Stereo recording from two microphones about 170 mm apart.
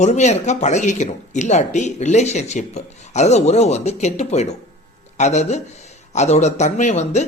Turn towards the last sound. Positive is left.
turn(degrees=45)  # may be behind; listen again after turning